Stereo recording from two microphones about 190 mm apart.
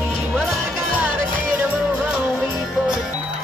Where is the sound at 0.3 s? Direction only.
Centre (ahead or behind).